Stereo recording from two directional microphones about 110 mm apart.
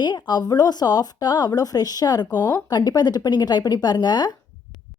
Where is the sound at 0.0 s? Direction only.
40° left (ahead or behind).